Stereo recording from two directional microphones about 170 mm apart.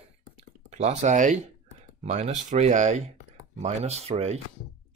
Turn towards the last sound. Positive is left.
turn(degrees=-40)  # may be behind; listen again after turning